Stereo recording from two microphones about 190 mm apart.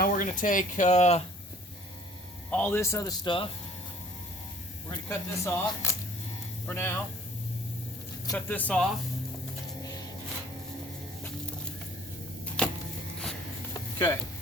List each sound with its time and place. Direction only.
0.0 s speech: 45° left (ahead or behind)
2.5 s speech: 10° left (ahead or behind)
4.9 s speech: 15° left (ahead or behind)
8.3 s speech: 10° left (ahead or behind)
12.6 s a sound: 5° left (ahead or behind)